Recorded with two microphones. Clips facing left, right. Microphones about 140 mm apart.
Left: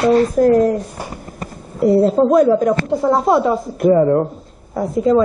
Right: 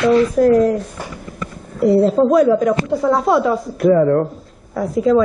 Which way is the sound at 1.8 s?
Centre (ahead or behind).